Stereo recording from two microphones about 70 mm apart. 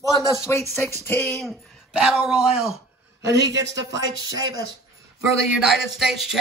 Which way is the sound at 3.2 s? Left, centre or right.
Right.